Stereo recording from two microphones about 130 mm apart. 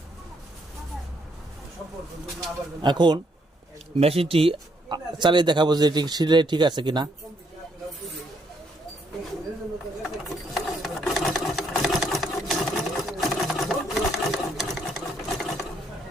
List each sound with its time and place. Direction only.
2.8 s speech: 35° right (ahead or behind)
4.0 s speech: 50° right (ahead or behind)
10.0 s sewing machine: centre (ahead or behind)